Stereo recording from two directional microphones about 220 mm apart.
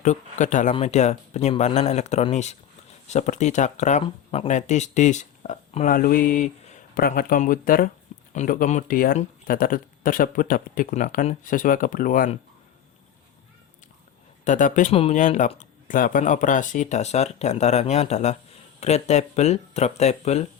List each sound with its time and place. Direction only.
0.0 s speech: 30° left (ahead or behind)
14.4 s speech: 35° left (ahead or behind)